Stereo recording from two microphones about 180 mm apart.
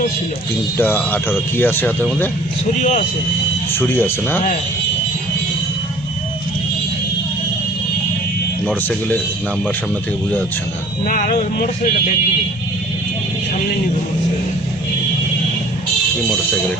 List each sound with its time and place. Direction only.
0.8 s speech: 10° left (ahead or behind)
3.7 s speech: 10° left (ahead or behind)
11.0 s speech: 45° left (ahead or behind)